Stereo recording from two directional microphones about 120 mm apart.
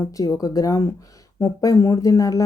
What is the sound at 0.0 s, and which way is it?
Speech, 30° left (ahead or behind).